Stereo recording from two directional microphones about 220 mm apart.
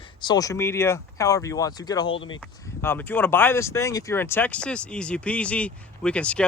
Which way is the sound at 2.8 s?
10° left (ahead or behind).